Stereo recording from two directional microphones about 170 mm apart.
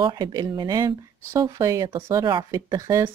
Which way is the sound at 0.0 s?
25° right (ahead or behind).